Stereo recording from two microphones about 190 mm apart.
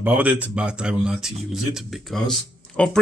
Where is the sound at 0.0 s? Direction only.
5° right (ahead or behind).